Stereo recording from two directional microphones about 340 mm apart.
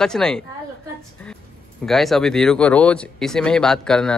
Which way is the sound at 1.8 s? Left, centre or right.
Centre.